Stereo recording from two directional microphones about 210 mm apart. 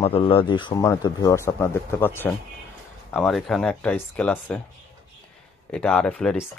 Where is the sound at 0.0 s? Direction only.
25° left (ahead or behind); by 4.6 s 10° left (ahead or behind).